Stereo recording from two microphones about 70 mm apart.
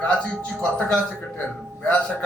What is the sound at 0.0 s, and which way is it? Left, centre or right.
A man's voice, centre.